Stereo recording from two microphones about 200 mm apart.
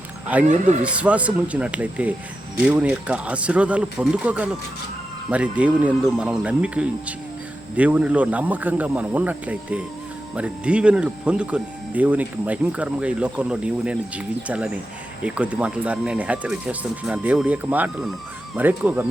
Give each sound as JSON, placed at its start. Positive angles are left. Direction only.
{"t": 0.4, "sound": "speech", "side_deg": -35}
{"t": 0.9, "sound": "speech", "side_deg": -5}